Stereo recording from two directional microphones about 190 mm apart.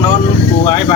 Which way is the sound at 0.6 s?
25° left (ahead or behind).